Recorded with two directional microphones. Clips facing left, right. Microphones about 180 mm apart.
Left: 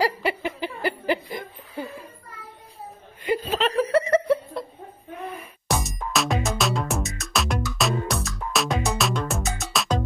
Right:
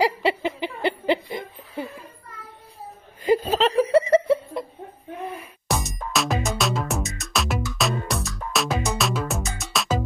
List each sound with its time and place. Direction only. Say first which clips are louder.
0.0 s laughter: right 2 dB; 25° right (ahead or behind)
3.3 s laughter: right 1 dB; 40° right (ahead or behind)
5.7 s music: even; centre (ahead or behind)